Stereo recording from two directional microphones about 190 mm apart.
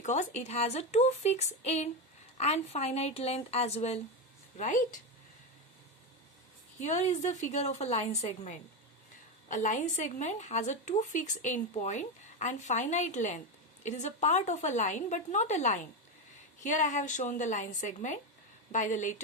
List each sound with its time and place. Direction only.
0.0 s a woman's voice: 40° left (ahead or behind)
6.7 s a woman's voice: 40° left (ahead or behind)